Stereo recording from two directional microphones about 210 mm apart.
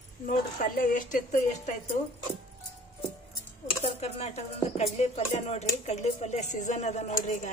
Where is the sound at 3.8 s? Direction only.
30° left (ahead or behind).